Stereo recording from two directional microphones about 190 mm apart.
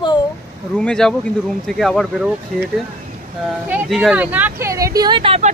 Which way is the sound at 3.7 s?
5° right (ahead or behind).